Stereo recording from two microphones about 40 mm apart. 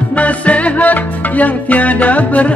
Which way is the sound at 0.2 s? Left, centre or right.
Left.